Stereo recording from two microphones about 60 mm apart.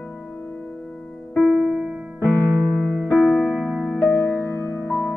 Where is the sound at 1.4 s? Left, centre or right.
Centre.